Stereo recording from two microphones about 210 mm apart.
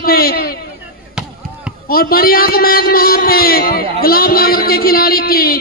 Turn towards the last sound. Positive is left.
turn(degrees=45)  # may be behind; listen again after turning